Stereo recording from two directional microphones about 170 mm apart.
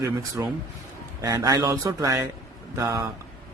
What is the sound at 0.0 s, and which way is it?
Speech, 20° right (ahead or behind).